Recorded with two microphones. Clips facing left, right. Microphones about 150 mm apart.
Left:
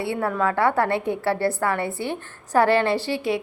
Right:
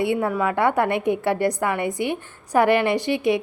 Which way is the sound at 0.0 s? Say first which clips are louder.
Right 2 dB; 15° right (ahead or behind).